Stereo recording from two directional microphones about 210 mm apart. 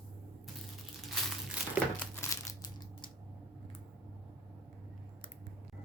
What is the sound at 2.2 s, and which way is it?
Crumpling, 15° left (ahead or behind).